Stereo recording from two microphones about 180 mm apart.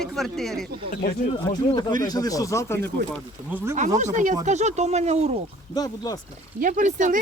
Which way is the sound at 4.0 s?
45° right (ahead or behind).